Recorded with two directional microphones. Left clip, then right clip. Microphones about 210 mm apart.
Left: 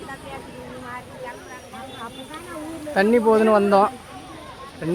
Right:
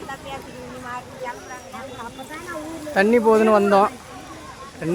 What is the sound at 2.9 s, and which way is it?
Speech, centre (ahead or behind).